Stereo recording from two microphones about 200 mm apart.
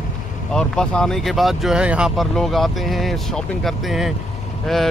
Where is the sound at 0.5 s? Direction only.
5° left (ahead or behind).